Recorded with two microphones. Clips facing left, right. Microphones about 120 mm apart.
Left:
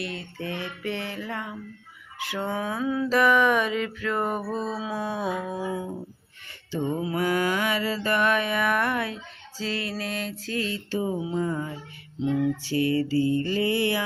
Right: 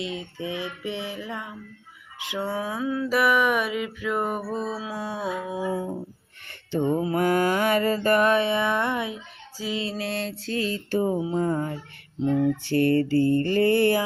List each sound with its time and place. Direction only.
0.0 s mantra: 15° right (ahead or behind)
2.1 s a sound: 20° right (ahead or behind)
2.4 s mantra: 5° right (ahead or behind)
4.8 s a sound: centre (ahead or behind)
6.8 s mantra: 40° right (ahead or behind); by 9.8 s 15° right (ahead or behind)
9.8 s mantra: 25° right (ahead or behind)
12.6 s mantra: 55° right (ahead or behind)